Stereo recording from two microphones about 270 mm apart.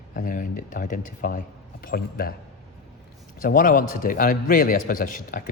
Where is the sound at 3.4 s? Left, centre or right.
Left.